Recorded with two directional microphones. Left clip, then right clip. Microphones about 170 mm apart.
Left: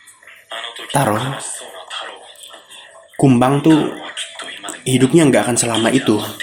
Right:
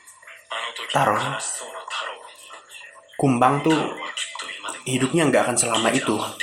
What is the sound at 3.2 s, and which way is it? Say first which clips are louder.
Speech: left 4 dB; 40° left (ahead or behind).